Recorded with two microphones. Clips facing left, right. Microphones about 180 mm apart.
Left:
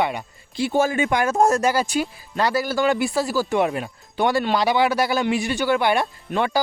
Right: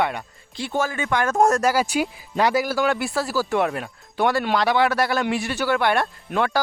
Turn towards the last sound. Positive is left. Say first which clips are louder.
# even
turn(degrees=0)  # may be behind; listen again after turning